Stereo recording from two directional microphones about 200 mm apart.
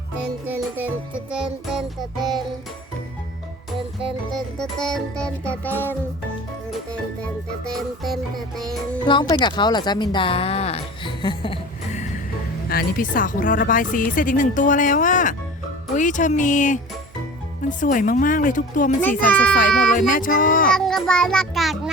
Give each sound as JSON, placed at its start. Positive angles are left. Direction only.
{"t": 0.4, "sound": "music", "side_deg": -10}
{"t": 4.3, "sound": "music", "side_deg": 0}
{"t": 7.6, "sound": "music", "side_deg": 0}
{"t": 9.0, "sound": "a woman's voice", "side_deg": 25}
{"t": 12.6, "sound": "speech", "side_deg": 45}
{"t": 19.0, "sound": "a child's voice", "side_deg": 5}
{"t": 19.9, "sound": "speech", "side_deg": 40}
{"t": 20.7, "sound": "music", "side_deg": 0}